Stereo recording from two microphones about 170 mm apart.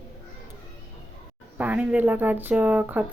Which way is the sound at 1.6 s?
10° right (ahead or behind).